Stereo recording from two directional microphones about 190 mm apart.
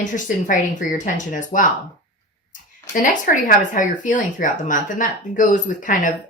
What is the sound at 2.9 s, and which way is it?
Speech, 45° left (ahead or behind).